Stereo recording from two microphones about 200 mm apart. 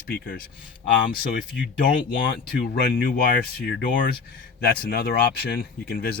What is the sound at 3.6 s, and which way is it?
Speech, 55° left (ahead or behind).